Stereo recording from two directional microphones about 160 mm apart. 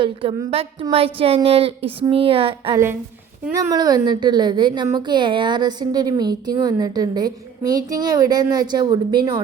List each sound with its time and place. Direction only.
0.0 s a woman's voice: 35° right (ahead or behind)
3.7 s a woman's voice: 25° right (ahead or behind)